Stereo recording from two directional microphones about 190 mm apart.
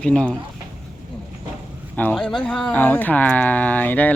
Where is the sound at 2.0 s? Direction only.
5° left (ahead or behind).